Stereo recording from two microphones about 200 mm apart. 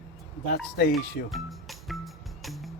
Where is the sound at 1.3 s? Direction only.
Centre (ahead or behind).